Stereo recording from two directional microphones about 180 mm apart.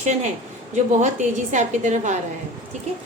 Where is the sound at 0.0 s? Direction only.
40° right (ahead or behind).